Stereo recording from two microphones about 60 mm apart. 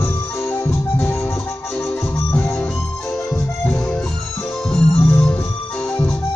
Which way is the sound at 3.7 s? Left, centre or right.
Centre.